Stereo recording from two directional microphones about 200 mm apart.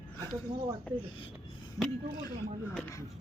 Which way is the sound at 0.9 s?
5° left (ahead or behind).